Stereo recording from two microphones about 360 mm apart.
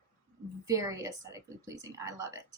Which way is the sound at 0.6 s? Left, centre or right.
Centre.